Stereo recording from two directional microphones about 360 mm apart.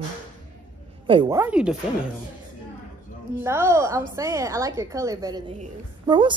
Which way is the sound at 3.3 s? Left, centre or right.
Centre.